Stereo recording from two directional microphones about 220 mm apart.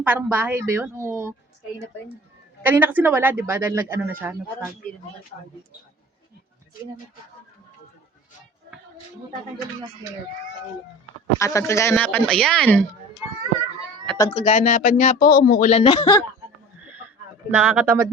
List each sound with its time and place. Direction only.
0.0 s speech: 10° right (ahead or behind)
2.6 s speech: 10° right (ahead or behind)
11.3 s speech: 15° left (ahead or behind)
14.2 s speech: 25° left (ahead or behind); by 15.7 s 40° left (ahead or behind)
15.7 s speech: 25° left (ahead or behind)
16.8 s a sound: 5° right (ahead or behind)
17.5 s speech: 5° right (ahead or behind)